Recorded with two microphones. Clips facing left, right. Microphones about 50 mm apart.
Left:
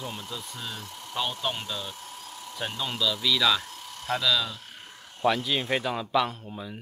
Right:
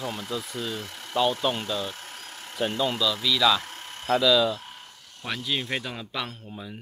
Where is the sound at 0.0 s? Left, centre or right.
Right.